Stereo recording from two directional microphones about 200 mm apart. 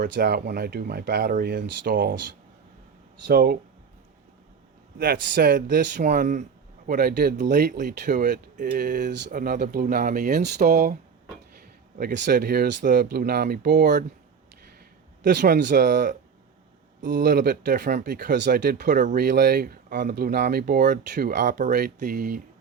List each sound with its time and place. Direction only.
0.1 s speech: 50° right (ahead or behind)
3.2 s speech: 50° right (ahead or behind)
4.9 s speech: 50° right (ahead or behind)
11.9 s speech: 55° right (ahead or behind)
15.4 s speech: 55° right (ahead or behind)
17.2 s speech: 45° right (ahead or behind)
18.3 s speech: 60° right (ahead or behind)